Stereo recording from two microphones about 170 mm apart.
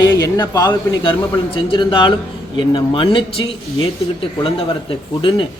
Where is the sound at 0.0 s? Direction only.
25° left (ahead or behind).